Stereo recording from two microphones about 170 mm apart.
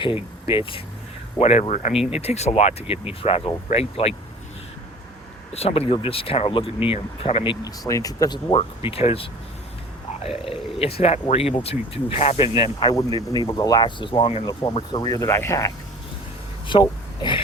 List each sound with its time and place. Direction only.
0.0 s speech: 30° left (ahead or behind)
5.5 s speech: 35° left (ahead or behind)
7.6 s speech: 20° left (ahead or behind)
16.7 s speech: 30° left (ahead or behind)